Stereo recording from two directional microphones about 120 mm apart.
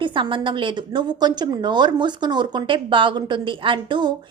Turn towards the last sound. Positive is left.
turn(degrees=-40)  # may be behind; listen again after turning